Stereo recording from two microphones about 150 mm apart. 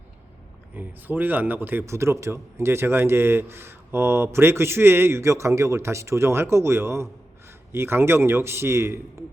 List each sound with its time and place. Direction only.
0.8 s a man's voice: 10° right (ahead or behind)